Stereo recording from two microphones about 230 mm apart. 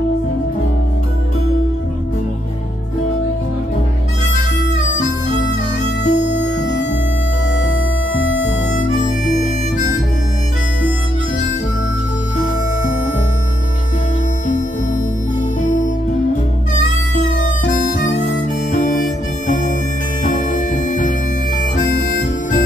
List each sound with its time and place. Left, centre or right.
6.0 s music: left
6.3 s music: left
7.6 s harmonica: left
8.9 s harmonica: left
15.6 s music: left
17.9 s harmonica: left
20.2 s music: left